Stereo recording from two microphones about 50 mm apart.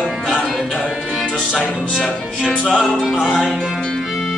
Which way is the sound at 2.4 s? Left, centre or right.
Centre.